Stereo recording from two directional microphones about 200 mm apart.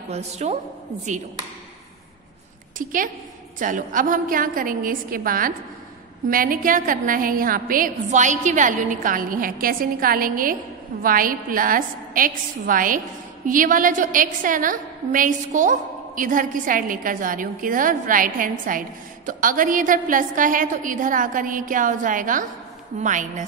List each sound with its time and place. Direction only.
0.1 s a woman's voice: 35° right (ahead or behind)
2.8 s a woman's voice: 45° right (ahead or behind)